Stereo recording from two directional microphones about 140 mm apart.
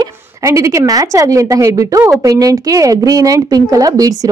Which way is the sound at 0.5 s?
20° right (ahead or behind).